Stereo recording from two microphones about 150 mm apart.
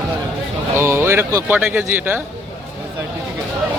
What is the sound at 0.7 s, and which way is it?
Speech, 15° right (ahead or behind).